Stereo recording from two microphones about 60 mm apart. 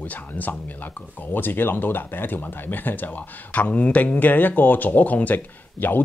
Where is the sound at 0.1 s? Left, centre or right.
Left.